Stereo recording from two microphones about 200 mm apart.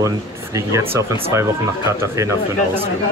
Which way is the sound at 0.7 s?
15° right (ahead or behind).